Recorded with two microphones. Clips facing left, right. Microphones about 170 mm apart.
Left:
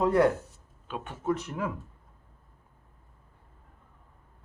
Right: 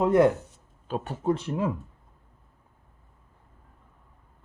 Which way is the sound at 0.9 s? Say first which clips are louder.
Right 4 dB; 35° right (ahead or behind).